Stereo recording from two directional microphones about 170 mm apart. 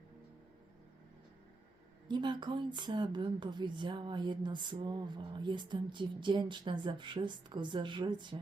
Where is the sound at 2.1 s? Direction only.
25° right (ahead or behind).